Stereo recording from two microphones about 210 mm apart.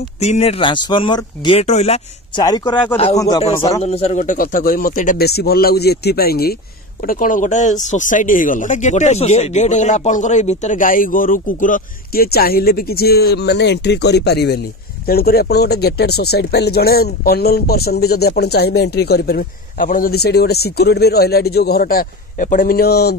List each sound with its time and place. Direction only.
0.2 s speech: 30° left (ahead or behind)
2.4 s a man's voice: 20° left (ahead or behind)
3.8 s speech: 30° left (ahead or behind); by 23.1 s 50° left (ahead or behind)